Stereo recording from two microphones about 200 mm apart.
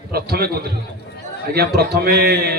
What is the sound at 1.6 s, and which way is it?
Speech, 50° right (ahead or behind).